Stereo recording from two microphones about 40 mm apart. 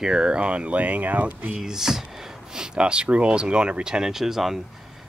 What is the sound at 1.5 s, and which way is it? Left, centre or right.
Speech, centre.